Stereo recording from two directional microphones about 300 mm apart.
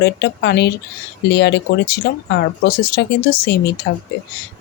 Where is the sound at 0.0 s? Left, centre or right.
Left.